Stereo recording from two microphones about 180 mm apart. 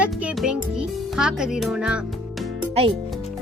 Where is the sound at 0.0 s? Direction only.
5° right (ahead or behind).